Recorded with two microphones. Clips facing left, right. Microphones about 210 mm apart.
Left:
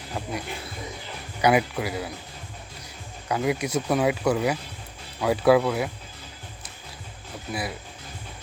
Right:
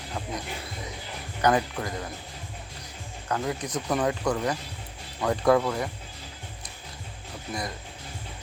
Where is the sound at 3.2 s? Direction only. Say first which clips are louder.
Left 4 dB; 10° left (ahead or behind).